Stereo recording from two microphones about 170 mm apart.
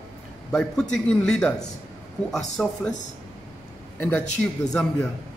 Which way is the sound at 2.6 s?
Centre (ahead or behind).